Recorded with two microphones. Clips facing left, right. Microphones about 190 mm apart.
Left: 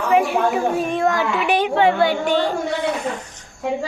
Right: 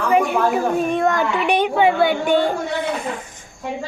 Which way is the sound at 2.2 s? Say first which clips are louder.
Right 2 dB; 55° right (ahead or behind).